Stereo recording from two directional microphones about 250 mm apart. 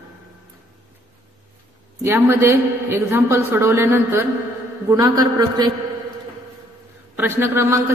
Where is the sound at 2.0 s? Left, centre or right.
Centre.